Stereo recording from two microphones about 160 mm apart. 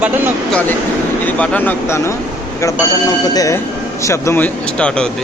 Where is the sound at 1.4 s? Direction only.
10° left (ahead or behind).